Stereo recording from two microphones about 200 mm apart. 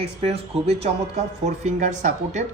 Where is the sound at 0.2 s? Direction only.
30° right (ahead or behind).